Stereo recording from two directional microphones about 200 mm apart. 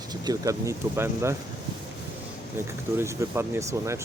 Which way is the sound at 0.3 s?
15° right (ahead or behind).